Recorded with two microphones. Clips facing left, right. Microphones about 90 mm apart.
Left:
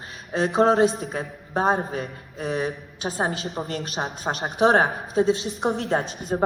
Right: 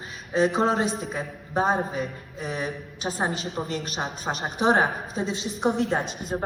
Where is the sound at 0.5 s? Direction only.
35° left (ahead or behind).